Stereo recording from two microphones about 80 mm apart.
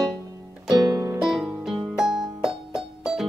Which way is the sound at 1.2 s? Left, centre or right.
Centre.